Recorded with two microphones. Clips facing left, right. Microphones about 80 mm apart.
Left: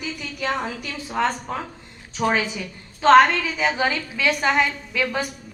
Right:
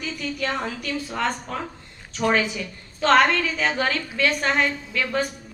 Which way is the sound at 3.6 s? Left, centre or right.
Centre.